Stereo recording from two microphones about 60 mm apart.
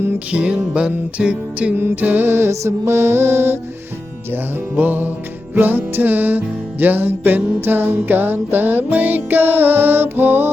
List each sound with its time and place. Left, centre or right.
0.3 s music: centre
2.0 s music: right
4.8 s music: right